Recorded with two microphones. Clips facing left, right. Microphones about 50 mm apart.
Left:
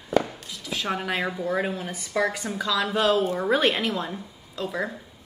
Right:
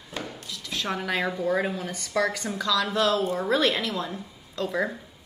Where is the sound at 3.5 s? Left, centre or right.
Left.